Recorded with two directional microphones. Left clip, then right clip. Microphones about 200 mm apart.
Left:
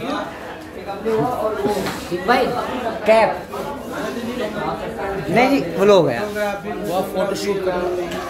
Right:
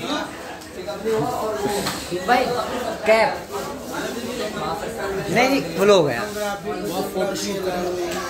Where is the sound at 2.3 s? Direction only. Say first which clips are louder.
Left 2 dB; 50° left (ahead or behind).